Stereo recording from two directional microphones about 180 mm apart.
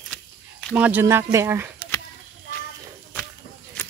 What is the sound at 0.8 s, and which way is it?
Speech, 10° right (ahead or behind).